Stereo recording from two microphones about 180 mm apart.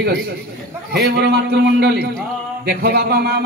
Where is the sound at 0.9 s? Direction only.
65° right (ahead or behind).